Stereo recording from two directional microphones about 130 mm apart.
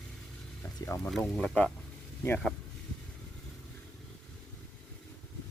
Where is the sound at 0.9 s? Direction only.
20° left (ahead or behind).